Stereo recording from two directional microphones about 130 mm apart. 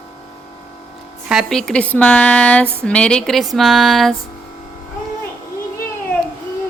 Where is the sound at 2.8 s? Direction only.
10° left (ahead or behind).